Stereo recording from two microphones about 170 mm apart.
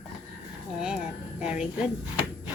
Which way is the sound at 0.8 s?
5° right (ahead or behind).